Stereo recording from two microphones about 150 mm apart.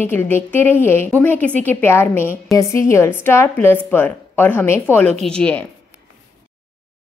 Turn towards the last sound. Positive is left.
turn(degrees=10)  # may be behind; listen again after turning